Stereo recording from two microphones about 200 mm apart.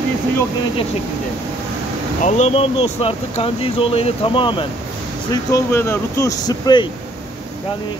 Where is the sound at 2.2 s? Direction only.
35° left (ahead or behind); by 6.9 s 20° left (ahead or behind).